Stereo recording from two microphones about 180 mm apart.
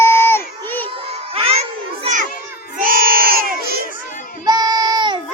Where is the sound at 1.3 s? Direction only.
35° right (ahead or behind).